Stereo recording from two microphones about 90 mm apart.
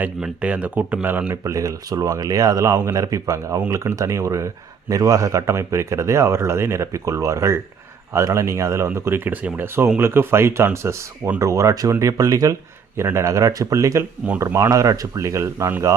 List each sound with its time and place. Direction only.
0.0 s speech: 15° right (ahead or behind)
1.3 s speech: 35° right (ahead or behind)
13.0 s speech: 30° right (ahead or behind)